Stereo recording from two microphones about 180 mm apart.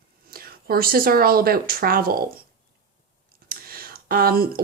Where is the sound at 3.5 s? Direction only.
55° right (ahead or behind).